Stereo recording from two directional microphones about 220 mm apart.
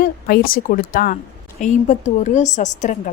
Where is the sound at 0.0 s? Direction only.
40° left (ahead or behind).